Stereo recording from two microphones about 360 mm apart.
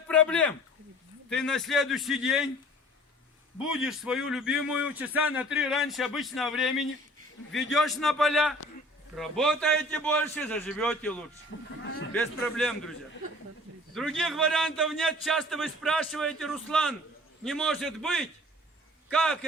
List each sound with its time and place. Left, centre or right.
0.1 s a man's voice: centre
3.6 s a man's voice: centre
11.8 s speech: left
12.1 s a man's voice: centre
13.9 s a man's voice: centre